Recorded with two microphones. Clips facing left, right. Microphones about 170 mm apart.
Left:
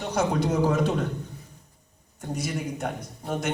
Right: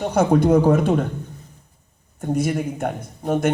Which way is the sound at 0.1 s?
55° right (ahead or behind).